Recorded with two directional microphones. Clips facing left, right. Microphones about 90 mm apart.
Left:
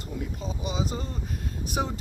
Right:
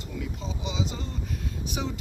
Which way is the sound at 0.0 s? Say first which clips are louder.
Left 1 dB; 45° left (ahead or behind).